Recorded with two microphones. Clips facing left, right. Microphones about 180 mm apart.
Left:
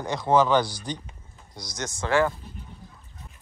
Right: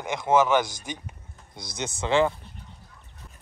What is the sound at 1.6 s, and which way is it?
Speech, 55° right (ahead or behind).